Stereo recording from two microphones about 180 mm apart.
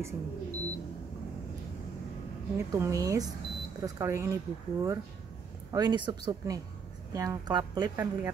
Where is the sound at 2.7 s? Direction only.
15° right (ahead or behind).